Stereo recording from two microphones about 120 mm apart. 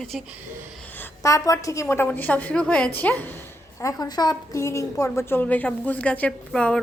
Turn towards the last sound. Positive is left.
turn(degrees=10)  # may be behind; listen again after turning